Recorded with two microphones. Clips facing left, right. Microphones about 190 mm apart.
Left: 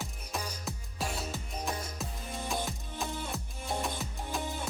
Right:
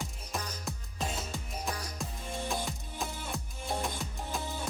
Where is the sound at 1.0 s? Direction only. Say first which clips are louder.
Even; 20° right (ahead or behind).